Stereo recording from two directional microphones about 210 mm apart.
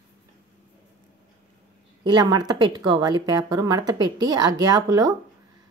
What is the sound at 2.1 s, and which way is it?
A woman's voice, 20° right (ahead or behind).